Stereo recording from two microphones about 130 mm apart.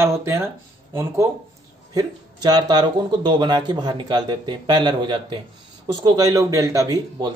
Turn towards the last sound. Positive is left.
turn(degrees=-25)  # may be behind; listen again after turning